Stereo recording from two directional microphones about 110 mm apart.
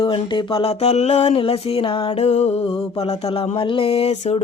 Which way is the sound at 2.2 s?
75° left (ahead or behind).